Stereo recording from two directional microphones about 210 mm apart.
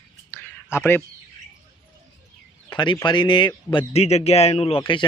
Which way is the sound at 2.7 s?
20° left (ahead or behind).